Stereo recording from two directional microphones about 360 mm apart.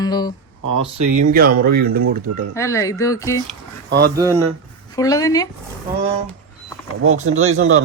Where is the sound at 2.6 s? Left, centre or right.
Centre.